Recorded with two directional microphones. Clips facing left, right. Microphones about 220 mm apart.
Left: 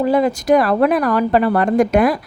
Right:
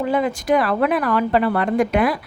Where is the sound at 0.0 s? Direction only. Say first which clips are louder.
Left 5 dB; 40° left (ahead or behind).